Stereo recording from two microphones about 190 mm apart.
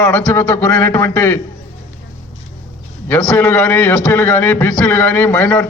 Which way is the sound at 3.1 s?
5° left (ahead or behind).